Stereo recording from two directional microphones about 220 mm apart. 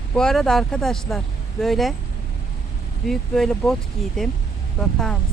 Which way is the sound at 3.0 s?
Centre (ahead or behind).